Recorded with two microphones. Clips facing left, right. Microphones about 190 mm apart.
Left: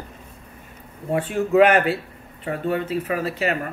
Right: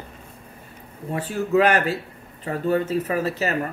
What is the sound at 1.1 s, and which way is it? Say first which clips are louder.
Speech: left 2 dB; 35° right (ahead or behind).